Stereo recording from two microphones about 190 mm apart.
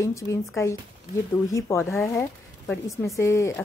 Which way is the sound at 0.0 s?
15° left (ahead or behind).